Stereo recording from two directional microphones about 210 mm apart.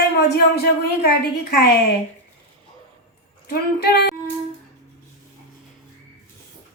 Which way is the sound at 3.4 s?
50° left (ahead or behind).